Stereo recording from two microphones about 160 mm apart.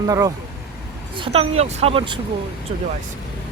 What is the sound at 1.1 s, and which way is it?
Speech, 35° right (ahead or behind).